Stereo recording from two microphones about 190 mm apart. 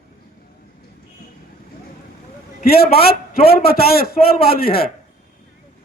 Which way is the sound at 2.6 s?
55° left (ahead or behind).